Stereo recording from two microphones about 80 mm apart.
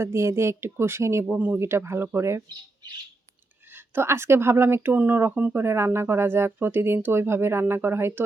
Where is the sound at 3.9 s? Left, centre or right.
Right.